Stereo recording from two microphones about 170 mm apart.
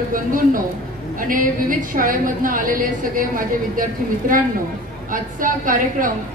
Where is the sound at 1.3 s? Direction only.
55° right (ahead or behind).